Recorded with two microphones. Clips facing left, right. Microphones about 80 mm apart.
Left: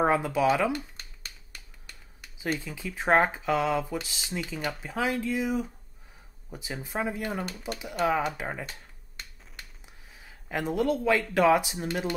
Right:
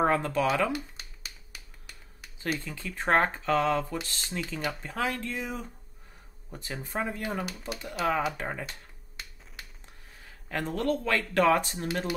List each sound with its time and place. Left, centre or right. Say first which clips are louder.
0.0 s a sound: left 2 dB; centre
2.6 s speech: left 1 dB; centre
8.3 s finger snapping: even; centre
10.1 s speech: left 1 dB; centre